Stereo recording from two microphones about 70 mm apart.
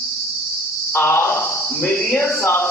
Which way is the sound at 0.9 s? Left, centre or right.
Left.